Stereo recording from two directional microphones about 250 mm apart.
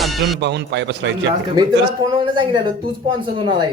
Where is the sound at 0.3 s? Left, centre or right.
Right.